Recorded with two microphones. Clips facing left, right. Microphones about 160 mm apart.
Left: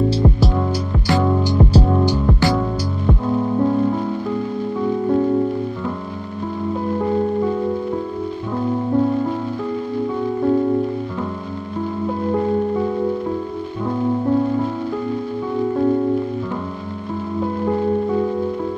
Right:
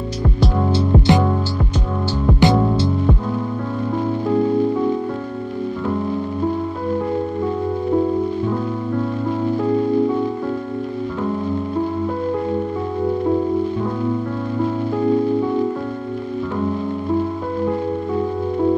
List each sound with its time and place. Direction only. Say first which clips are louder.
0.9 s music: right 4 dB; 20° right (ahead or behind)
2.4 s music: right 4 dB; 20° right (ahead or behind)